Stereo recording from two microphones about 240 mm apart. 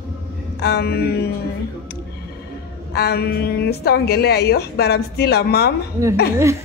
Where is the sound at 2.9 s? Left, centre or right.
Left.